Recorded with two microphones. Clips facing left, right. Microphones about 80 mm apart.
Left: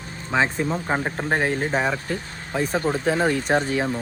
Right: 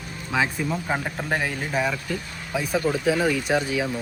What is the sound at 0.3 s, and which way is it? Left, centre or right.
Speech, left.